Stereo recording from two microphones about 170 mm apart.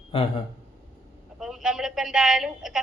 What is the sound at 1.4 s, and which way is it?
A woman's voice, 5° right (ahead or behind).